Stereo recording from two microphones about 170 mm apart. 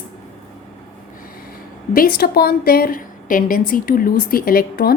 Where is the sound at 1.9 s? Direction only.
60° left (ahead or behind).